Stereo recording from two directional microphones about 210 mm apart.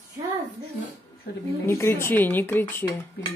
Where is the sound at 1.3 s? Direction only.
50° left (ahead or behind).